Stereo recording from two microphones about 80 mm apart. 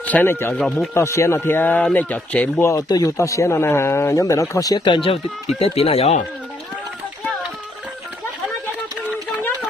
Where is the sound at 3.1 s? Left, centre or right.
Left.